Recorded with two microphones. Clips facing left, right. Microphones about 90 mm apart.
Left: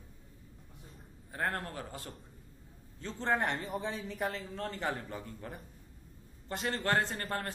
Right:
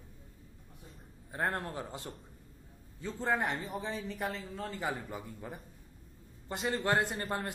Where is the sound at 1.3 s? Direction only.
20° right (ahead or behind).